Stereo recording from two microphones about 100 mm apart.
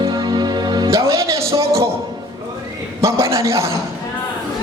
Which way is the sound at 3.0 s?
30° right (ahead or behind).